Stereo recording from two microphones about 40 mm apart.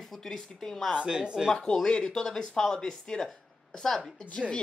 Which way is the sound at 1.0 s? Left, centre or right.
Right.